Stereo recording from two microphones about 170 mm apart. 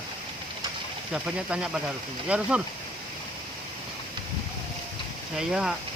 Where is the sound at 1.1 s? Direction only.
5° right (ahead or behind).